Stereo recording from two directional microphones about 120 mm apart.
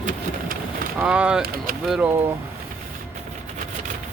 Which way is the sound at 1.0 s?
10° right (ahead or behind).